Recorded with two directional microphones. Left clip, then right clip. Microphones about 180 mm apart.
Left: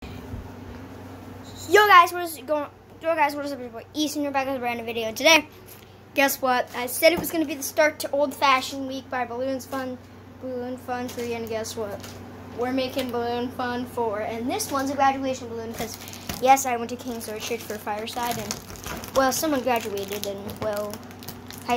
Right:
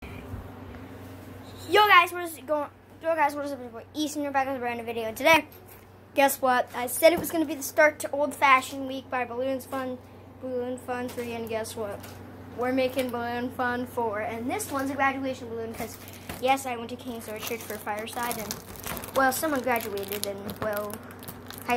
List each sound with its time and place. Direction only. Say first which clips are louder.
1.7 s a sound: left 4 dB; 10° left (ahead or behind)
2.1 s a woman's voice: left 3 dB; 10° left (ahead or behind)
16.3 s a woman's voice: left 7 dB; 25° left (ahead or behind); by 19.8 s 10° left (ahead or behind)
20.1 s a woman's voice: left 2 dB; 10° right (ahead or behind)